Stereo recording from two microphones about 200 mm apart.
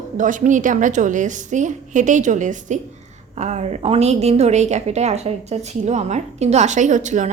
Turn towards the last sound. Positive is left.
turn(degrees=-35)  # may be behind; listen again after turning